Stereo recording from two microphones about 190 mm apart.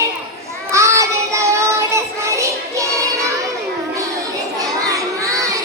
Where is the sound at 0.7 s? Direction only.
15° right (ahead or behind).